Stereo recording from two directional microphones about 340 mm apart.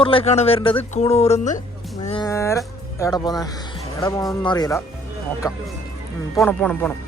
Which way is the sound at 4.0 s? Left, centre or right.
Centre.